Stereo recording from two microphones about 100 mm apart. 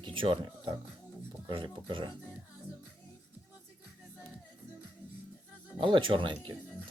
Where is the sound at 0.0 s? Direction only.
60° right (ahead or behind).